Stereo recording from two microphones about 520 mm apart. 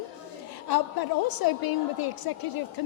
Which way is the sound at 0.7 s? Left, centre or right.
Left.